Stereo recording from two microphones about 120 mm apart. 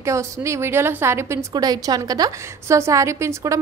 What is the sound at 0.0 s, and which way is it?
A woman's voice, 25° right (ahead or behind).